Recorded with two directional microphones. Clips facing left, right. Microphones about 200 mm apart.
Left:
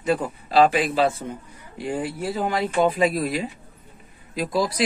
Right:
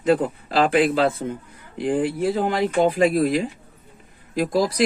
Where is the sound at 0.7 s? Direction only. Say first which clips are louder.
Right 3 dB; 55° right (ahead or behind).